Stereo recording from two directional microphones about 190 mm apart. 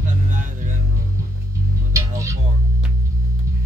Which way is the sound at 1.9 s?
15° right (ahead or behind).